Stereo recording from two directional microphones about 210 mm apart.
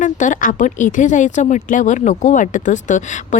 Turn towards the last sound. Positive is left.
turn(degrees=35)  # may be behind; listen again after turning